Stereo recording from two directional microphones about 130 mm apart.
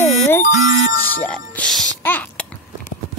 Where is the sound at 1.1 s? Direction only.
10° left (ahead or behind).